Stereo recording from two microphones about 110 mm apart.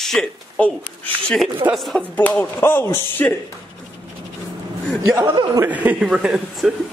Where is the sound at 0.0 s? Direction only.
5° left (ahead or behind).